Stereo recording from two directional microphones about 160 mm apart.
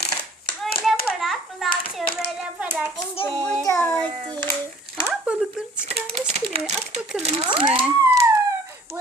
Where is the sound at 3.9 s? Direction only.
30° right (ahead or behind).